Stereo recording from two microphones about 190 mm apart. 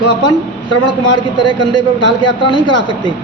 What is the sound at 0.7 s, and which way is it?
A man's voice, 25° left (ahead or behind).